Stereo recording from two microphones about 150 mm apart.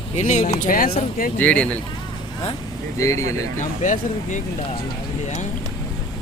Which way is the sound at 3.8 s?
60° left (ahead or behind).